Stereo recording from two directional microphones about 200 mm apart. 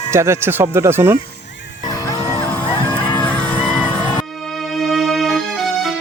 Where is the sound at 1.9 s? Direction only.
15° left (ahead or behind).